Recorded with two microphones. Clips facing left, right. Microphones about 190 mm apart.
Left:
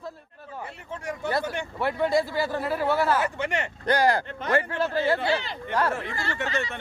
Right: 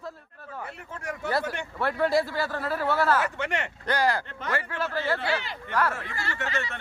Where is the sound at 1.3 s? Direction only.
Centre (ahead or behind).